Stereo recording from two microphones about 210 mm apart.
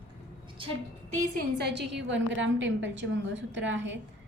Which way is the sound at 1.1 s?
40° right (ahead or behind).